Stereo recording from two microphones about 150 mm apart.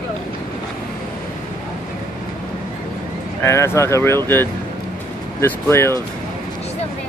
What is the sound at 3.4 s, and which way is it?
Speech, 20° left (ahead or behind).